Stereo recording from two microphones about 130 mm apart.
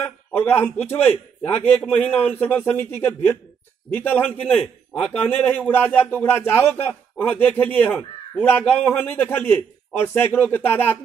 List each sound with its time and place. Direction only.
0.0 s a man's voice: 15° left (ahead or behind)